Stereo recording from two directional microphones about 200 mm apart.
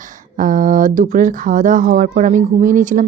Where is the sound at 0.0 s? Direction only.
40° right (ahead or behind).